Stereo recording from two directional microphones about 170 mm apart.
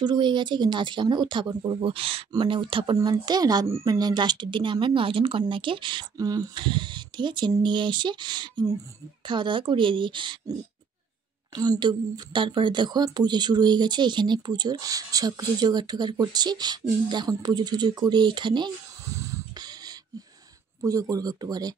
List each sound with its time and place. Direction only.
0.0 s speech: 25° right (ahead or behind)
11.5 s speech: 25° right (ahead or behind)
19.1 s a sound: 20° right (ahead or behind)
20.8 s speech: 20° right (ahead or behind)